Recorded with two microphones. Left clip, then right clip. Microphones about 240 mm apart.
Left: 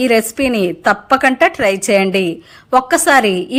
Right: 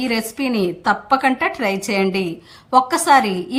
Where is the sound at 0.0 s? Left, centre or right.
Centre.